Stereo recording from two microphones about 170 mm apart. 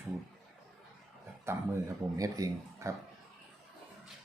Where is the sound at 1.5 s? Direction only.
15° right (ahead or behind).